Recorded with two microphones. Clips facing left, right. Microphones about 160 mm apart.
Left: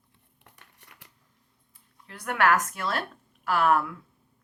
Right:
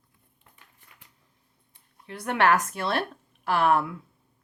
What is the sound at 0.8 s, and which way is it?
Shuffling cards, 75° left (ahead or behind).